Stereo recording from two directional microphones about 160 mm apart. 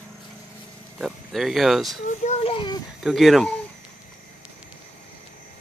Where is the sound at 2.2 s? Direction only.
40° left (ahead or behind).